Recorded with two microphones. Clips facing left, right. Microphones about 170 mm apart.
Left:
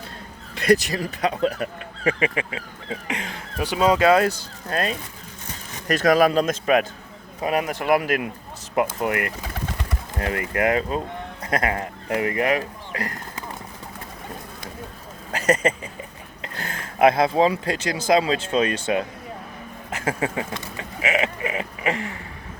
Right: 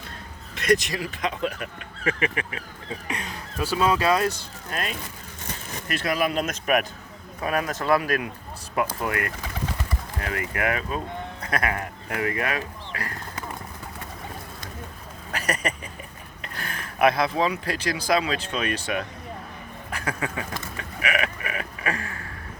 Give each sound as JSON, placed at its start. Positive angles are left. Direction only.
{"t": 0.5, "sound": "speech", "side_deg": 35}
{"t": 2.0, "sound": "speech", "side_deg": 25}
{"t": 3.1, "sound": "speech", "side_deg": 90}
{"t": 3.6, "sound": "speech", "side_deg": 20}
{"t": 5.9, "sound": "speech", "side_deg": 40}
{"t": 15.3, "sound": "a sound", "side_deg": 30}
{"t": 17.7, "sound": "speech", "side_deg": 25}